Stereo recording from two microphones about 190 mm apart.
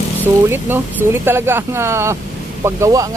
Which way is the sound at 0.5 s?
10° right (ahead or behind).